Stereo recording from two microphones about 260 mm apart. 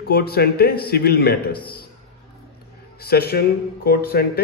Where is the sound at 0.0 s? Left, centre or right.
Left.